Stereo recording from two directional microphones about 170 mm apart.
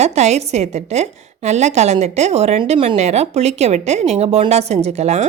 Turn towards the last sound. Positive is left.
turn(degrees=-40)  # may be behind; listen again after turning